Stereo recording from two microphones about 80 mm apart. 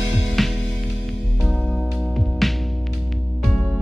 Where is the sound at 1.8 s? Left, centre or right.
Centre.